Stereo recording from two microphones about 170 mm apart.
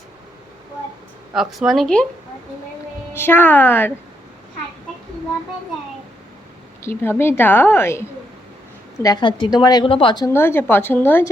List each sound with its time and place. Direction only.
1.3 s speech: centre (ahead or behind)
3.1 s a woman's voice: 15° left (ahead or behind)
6.8 s a woman's voice: 15° left (ahead or behind)
10.3 s a woman's voice: 15° left (ahead or behind)